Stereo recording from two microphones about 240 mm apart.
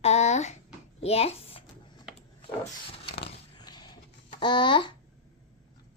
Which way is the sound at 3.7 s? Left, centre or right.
Centre.